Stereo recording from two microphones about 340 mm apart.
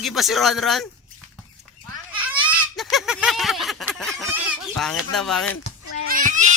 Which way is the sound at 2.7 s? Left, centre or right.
Centre.